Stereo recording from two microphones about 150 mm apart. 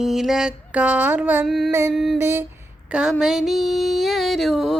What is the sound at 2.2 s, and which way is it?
Music, 15° right (ahead or behind).